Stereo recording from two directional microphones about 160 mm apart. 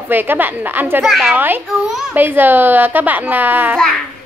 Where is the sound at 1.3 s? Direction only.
10° right (ahead or behind).